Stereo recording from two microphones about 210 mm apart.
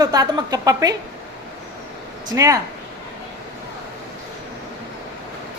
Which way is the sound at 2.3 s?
15° right (ahead or behind).